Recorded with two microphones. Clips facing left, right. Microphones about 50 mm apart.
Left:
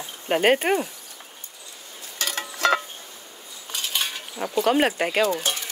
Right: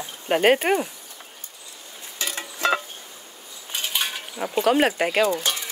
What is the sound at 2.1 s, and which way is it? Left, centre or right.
Music, left.